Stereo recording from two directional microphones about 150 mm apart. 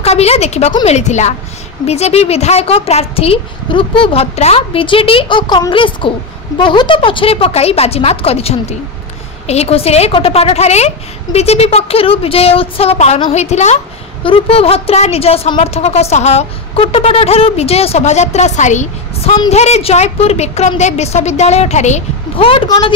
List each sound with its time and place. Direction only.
0.0 s a woman's voice: 45° left (ahead or behind)
14.2 s a woman's voice: 40° left (ahead or behind)
22.5 s a woman's voice: 35° left (ahead or behind)